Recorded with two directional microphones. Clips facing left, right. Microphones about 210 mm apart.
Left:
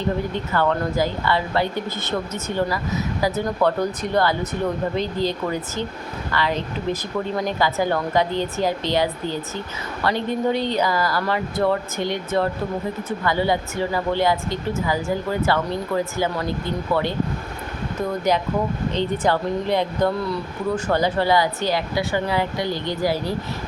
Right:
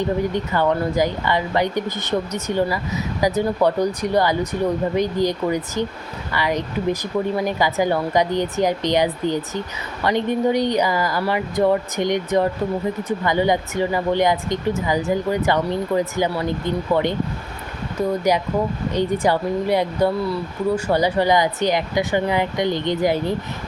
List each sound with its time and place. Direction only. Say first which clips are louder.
0.3 s speech: right 2 dB; 15° right (ahead or behind)
18.3 s speech: right 1 dB; 10° right (ahead or behind)